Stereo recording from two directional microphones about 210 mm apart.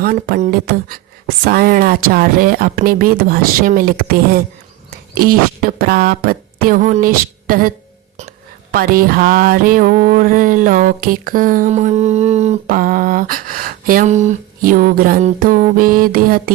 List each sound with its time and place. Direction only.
0.0 s speech: 45° right (ahead or behind)
8.7 s music: 45° right (ahead or behind)